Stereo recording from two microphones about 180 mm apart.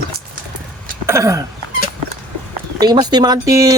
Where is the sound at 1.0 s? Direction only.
15° right (ahead or behind).